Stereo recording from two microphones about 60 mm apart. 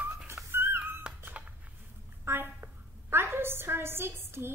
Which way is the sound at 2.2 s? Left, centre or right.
Right.